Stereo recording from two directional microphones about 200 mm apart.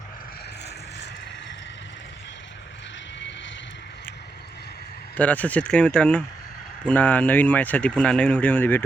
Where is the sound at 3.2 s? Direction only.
65° left (ahead or behind).